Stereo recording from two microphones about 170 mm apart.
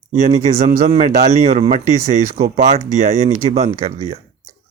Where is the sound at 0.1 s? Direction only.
45° right (ahead or behind).